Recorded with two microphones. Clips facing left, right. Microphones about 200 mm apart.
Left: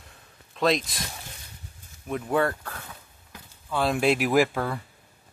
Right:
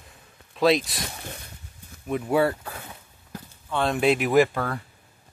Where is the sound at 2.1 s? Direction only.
5° right (ahead or behind).